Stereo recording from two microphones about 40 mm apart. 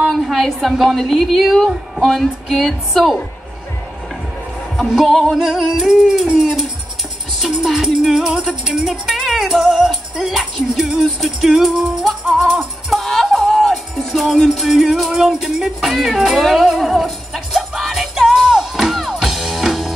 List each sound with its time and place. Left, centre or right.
0.1 s a woman's voice: centre
4.7 s speech: centre
5.4 s music: centre
6.2 s music: right
7.6 s music: centre
9.0 s music: centre